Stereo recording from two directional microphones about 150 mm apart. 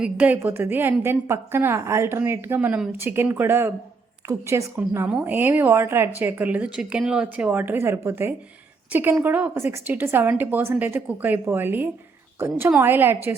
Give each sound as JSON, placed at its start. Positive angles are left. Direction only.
{"t": 0.0, "sound": "a woman's voice", "side_deg": -10}